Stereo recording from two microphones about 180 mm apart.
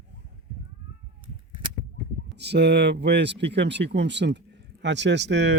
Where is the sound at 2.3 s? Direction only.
65° right (ahead or behind).